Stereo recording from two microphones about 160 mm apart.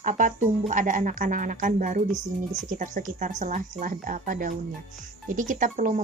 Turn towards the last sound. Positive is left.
turn(degrees=-55)  # may be behind; listen again after turning